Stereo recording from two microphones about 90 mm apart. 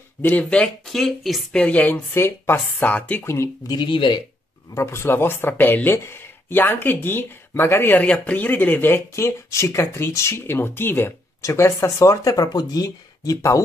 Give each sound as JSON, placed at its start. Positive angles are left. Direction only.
{"t": 0.2, "sound": "speech", "side_deg": 20}
{"t": 1.6, "sound": "speech", "side_deg": 15}
{"t": 3.6, "sound": "speech", "side_deg": 55}
{"t": 4.7, "sound": "speech", "side_deg": 30}